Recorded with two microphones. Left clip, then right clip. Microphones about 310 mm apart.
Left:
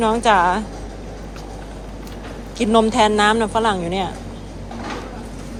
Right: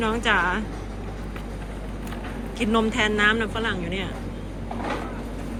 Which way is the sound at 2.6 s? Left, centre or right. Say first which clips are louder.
Left 8 dB; centre.